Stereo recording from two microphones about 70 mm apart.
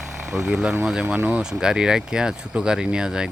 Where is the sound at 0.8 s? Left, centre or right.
Centre.